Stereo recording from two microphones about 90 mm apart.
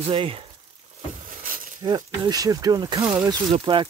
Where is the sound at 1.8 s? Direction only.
50° right (ahead or behind).